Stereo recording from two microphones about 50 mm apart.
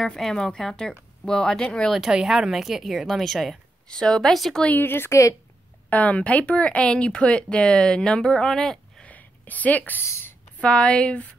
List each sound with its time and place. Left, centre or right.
0.2 s speech: centre
2.1 s a woman's voice: centre
3.9 s speech: centre
4.2 s a woman's voice: centre
4.6 s a woman's voice: left
5.9 s speech: left; by 9.0 s centre
9.0 s a sound: left
10.6 s speech: centre